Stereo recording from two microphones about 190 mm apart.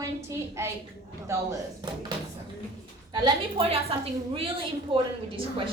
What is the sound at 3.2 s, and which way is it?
A woman's voice, 30° right (ahead or behind).